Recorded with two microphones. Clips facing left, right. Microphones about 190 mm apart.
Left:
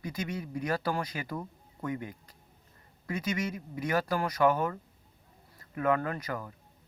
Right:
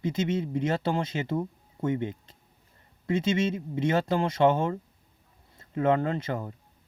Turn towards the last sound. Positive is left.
turn(degrees=-25)  # may be behind; listen again after turning